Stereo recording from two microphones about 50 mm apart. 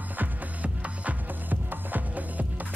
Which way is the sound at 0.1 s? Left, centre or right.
Right.